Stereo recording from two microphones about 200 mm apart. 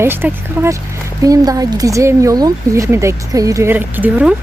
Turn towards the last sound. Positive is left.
turn(degrees=-5)  # may be behind; listen again after turning